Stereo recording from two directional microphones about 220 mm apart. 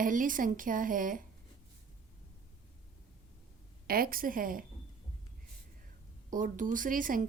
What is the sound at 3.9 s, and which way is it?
Speech, 40° right (ahead or behind).